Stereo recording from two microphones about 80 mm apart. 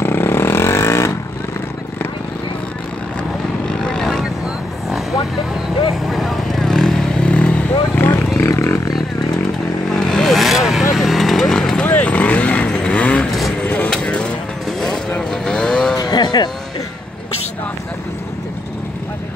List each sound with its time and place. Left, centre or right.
0.0 s vehicle: left
3.6 s vehicle: centre
6.0 s vehicle: centre; by 8.3 s left
8.4 s a sound: left
9.9 s vehicle: centre
16.0 s music: left